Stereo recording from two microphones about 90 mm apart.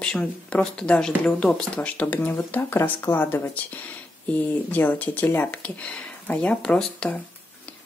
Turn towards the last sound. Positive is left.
turn(degrees=10)  # may be behind; listen again after turning